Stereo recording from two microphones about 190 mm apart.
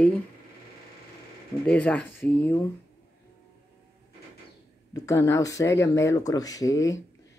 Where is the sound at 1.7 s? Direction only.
10° left (ahead or behind).